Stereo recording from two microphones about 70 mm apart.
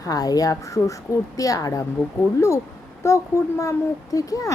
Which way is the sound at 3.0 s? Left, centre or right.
Left.